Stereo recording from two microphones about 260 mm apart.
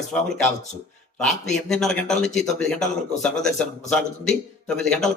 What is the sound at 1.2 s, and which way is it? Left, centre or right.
A man's voice, centre.